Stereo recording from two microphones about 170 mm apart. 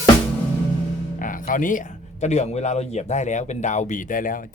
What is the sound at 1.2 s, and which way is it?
Speech, 50° left (ahead or behind).